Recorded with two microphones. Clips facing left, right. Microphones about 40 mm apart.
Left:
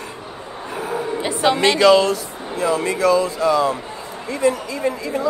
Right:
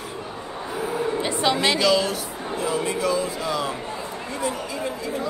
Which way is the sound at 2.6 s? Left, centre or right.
Left.